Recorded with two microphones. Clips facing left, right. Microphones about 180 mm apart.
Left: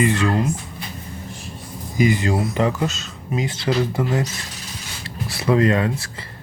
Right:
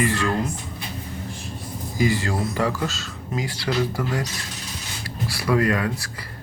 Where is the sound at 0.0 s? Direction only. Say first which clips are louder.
Left 4 dB; 20° left (ahead or behind).